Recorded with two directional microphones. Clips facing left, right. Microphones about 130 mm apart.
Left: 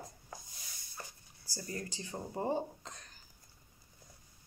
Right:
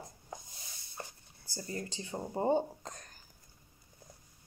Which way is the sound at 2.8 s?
45° right (ahead or behind).